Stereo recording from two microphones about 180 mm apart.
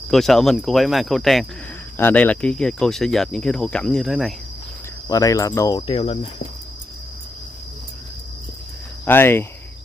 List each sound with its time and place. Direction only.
0.1 s speech: centre (ahead or behind)
2.0 s speech: 10° left (ahead or behind)
5.0 s speech: 20° left (ahead or behind)
9.0 s speech: 10° left (ahead or behind)